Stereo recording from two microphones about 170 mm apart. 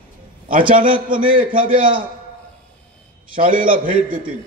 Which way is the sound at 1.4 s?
30° right (ahead or behind).